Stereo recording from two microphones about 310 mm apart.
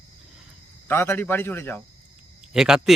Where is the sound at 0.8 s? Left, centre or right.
Centre.